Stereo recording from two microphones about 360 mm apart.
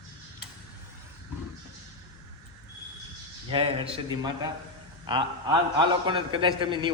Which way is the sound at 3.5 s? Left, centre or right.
Centre.